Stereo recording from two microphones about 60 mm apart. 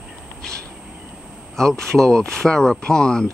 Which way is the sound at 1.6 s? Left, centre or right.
Centre.